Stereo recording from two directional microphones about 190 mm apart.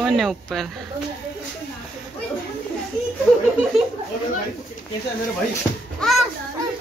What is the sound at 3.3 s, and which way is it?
Speech, 5° left (ahead or behind).